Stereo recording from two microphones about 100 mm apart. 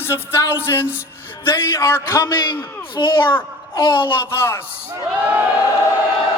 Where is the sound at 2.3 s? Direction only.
50° left (ahead or behind).